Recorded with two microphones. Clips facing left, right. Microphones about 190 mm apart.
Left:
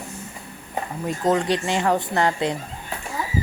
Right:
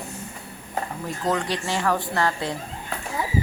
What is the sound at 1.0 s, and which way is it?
A woman's voice, 20° left (ahead or behind).